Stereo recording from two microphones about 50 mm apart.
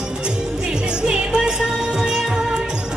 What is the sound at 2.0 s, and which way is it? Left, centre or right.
Music of bollywood, centre.